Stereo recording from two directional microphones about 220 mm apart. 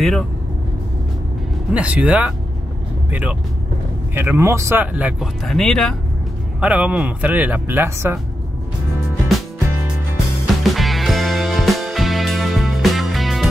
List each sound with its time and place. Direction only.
1.7 s speech: 5° right (ahead or behind)
10.4 s music: centre (ahead or behind)